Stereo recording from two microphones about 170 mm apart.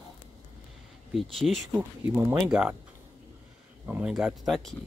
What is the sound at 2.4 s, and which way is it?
Speech, 5° right (ahead or behind).